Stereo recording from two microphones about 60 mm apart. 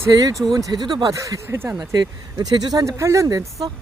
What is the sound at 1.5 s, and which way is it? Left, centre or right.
Speech, right.